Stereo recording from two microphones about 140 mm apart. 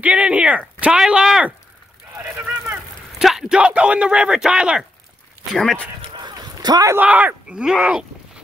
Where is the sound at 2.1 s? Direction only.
15° right (ahead or behind).